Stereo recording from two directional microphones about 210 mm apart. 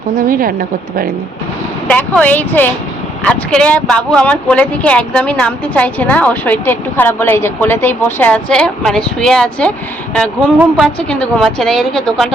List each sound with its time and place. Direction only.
0.2 s a woman's voice: 40° right (ahead or behind)
1.9 s speech: 5° left (ahead or behind)
10.8 s a woman's voice: 5° left (ahead or behind)